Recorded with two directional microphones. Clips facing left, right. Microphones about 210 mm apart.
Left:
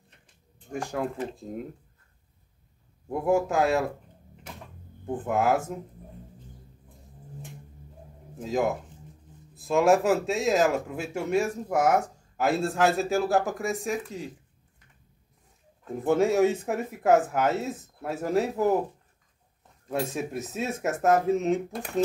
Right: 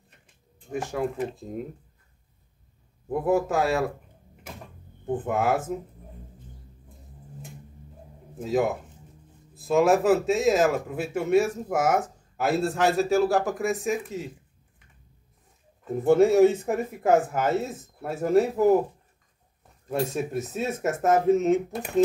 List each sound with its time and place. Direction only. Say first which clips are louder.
0.7 s speech: right 2 dB; centre (ahead or behind)
3.1 s speech: right 1 dB; centre (ahead or behind)
5.2 s speech: left 1 dB; centre (ahead or behind)
8.4 s speech: right 2 dB; 5° right (ahead or behind)
15.8 s speech: right 4 dB; centre (ahead or behind)
19.9 s speech: right 2 dB; centre (ahead or behind)